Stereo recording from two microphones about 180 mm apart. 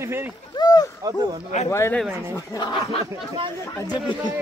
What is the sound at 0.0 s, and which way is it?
Speech, 15° right (ahead or behind).